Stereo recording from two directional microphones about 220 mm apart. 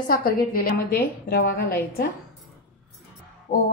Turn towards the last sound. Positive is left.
turn(degrees=20)  # may be behind; listen again after turning